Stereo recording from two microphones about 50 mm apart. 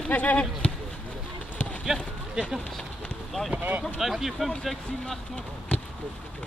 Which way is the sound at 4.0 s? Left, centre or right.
Centre.